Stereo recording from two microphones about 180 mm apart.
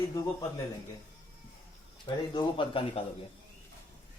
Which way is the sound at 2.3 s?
30° left (ahead or behind).